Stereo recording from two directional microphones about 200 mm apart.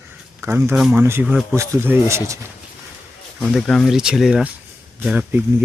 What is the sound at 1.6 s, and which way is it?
Speech, 10° right (ahead or behind).